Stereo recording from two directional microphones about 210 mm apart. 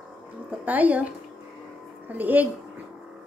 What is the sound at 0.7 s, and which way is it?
A woman's voice, 5° right (ahead or behind).